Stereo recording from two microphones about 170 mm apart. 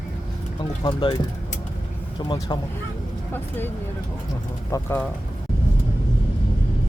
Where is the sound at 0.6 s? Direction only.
25° left (ahead or behind).